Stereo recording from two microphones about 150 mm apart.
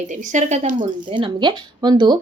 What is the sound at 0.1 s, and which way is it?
Speech, 55° right (ahead or behind).